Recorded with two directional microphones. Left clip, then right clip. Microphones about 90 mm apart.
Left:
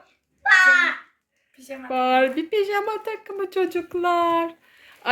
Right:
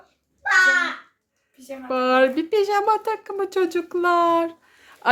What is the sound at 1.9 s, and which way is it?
Speech, 20° right (ahead or behind).